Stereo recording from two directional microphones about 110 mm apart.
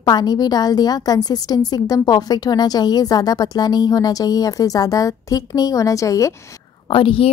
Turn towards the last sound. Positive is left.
turn(degrees=55)  # may be behind; listen again after turning